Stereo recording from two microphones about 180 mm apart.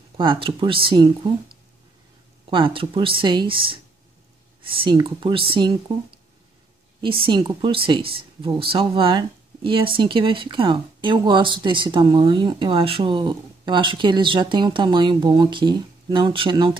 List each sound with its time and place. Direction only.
0.2 s speech: 25° right (ahead or behind)